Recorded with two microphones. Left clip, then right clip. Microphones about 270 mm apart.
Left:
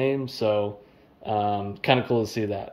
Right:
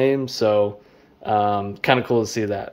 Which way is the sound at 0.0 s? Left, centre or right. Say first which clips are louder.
Right 6 dB; centre.